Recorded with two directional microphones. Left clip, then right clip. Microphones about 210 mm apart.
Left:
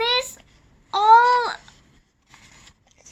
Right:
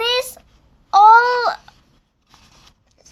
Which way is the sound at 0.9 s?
55° right (ahead or behind).